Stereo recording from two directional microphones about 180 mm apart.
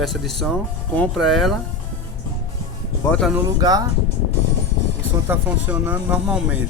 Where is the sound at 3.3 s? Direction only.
20° right (ahead or behind).